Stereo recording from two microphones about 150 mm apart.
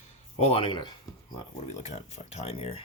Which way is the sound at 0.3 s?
45° left (ahead or behind).